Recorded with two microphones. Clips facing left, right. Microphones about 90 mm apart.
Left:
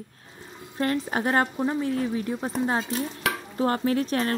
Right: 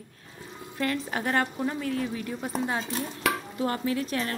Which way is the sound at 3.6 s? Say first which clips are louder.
Left 6 dB; 35° left (ahead or behind).